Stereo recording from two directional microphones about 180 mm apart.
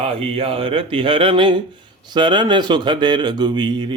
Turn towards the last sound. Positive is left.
turn(degrees=-25)  # may be behind; listen again after turning